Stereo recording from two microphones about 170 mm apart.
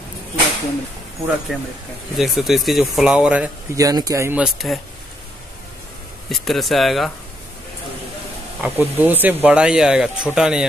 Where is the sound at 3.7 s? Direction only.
20° right (ahead or behind).